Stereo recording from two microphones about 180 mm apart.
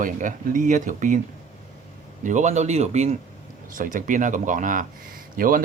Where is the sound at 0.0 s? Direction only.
50° right (ahead or behind).